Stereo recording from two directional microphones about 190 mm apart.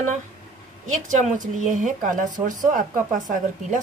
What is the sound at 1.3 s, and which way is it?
Speech, 40° right (ahead or behind).